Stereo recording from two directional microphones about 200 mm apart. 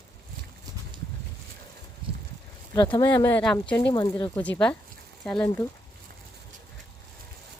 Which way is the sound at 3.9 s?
20° left (ahead or behind).